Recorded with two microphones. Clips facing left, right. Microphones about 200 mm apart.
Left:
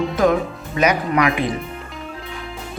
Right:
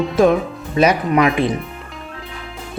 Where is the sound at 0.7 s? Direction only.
30° right (ahead or behind).